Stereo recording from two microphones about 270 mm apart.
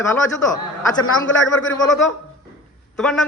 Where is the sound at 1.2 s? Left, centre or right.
Left.